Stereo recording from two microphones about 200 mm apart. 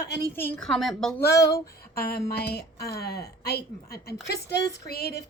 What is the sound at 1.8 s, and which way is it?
A woman's voice, 50° left (ahead or behind).